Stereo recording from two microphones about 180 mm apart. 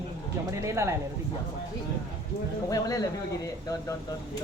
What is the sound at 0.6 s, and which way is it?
Speech, 15° right (ahead or behind).